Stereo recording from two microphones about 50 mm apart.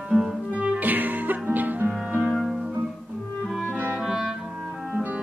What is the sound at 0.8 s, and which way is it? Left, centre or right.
Music, right.